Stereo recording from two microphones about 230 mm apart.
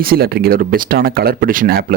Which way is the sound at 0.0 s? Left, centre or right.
Right.